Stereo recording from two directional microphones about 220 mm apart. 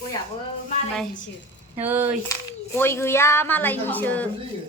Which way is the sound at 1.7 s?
10° right (ahead or behind).